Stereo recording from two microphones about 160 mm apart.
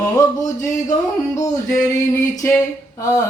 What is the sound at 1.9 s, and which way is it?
Mantra, 20° left (ahead or behind).